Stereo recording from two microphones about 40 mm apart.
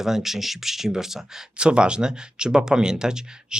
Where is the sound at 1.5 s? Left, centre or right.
Right.